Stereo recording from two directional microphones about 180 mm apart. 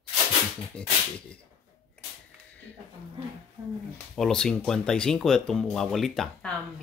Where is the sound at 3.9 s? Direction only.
5° left (ahead or behind).